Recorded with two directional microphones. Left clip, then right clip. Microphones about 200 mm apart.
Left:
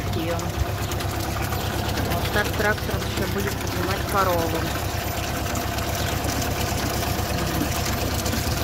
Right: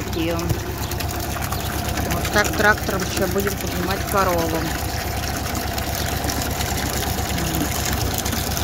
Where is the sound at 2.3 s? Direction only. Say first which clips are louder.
Right 7 dB; 30° right (ahead or behind).